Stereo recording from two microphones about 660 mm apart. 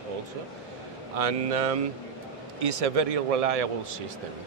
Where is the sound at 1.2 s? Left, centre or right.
Right.